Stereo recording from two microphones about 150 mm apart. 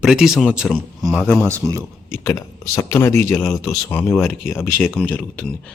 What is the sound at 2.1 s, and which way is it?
A man's voice, 20° left (ahead or behind).